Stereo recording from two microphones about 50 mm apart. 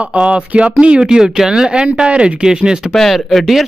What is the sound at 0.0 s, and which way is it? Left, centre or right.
Speech, right.